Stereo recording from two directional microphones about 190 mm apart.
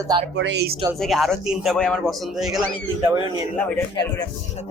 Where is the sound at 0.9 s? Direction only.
Centre (ahead or behind).